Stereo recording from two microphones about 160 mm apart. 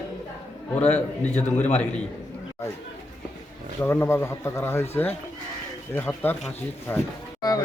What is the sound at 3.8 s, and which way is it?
Speech, 15° left (ahead or behind).